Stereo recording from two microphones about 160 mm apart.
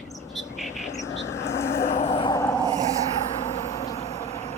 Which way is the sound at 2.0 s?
35° left (ahead or behind).